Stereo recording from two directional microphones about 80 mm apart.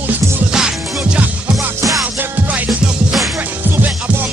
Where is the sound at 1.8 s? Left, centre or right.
Right.